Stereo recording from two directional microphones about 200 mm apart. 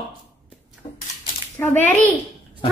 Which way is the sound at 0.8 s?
35° left (ahead or behind).